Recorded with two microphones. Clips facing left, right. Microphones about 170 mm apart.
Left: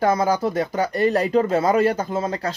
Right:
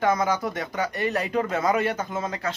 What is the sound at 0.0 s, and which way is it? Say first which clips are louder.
Speech: left 4 dB; 35° left (ahead or behind).